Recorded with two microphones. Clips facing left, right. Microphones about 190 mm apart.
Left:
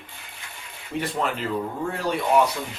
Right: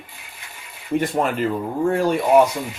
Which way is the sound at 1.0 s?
50° right (ahead or behind).